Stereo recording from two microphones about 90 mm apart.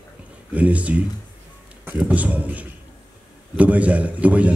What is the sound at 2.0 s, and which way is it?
A man's voice, 15° right (ahead or behind).